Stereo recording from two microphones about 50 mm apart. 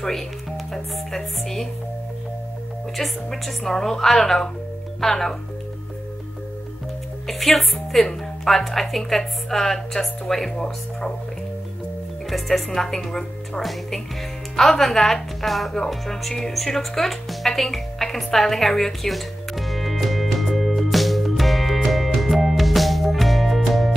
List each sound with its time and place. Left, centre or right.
0.7 s a woman's voice: centre
3.0 s a woman's voice: centre
7.2 s a woman's voice: centre
12.3 s a woman's voice: centre
15.9 s music: centre